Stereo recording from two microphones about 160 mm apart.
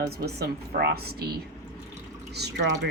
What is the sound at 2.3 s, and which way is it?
Speech, 90° right.